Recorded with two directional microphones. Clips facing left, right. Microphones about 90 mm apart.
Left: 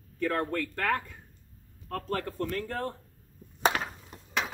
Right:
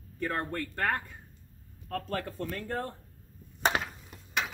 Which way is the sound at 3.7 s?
30° right (ahead or behind).